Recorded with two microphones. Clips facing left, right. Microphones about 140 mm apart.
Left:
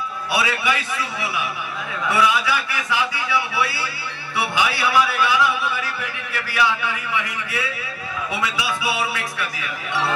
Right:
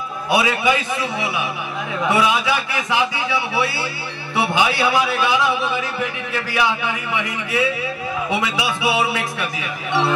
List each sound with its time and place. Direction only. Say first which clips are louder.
0.3 s a man's voice: right 5 dB; 20° right (ahead or behind)